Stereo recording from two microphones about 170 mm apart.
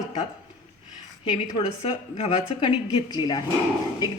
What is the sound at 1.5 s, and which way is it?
A woman's voice, 35° left (ahead or behind).